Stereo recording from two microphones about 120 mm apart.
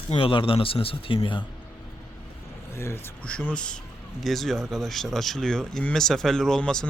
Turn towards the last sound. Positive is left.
turn(degrees=5)  # may be behind; listen again after turning